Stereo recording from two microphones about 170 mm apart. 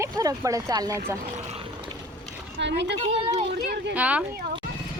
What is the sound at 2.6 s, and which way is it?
Speech, 90° right.